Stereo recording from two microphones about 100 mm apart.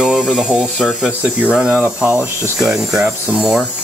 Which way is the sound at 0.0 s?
10° right (ahead or behind).